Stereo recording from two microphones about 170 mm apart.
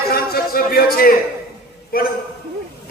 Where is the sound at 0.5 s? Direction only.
60° left (ahead or behind).